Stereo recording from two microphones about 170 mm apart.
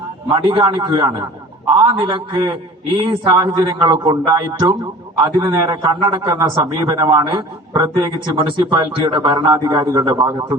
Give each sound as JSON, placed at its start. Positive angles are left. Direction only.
{"t": 0.4, "sound": "speech", "side_deg": -30}
{"t": 5.6, "sound": "speech", "side_deg": -30}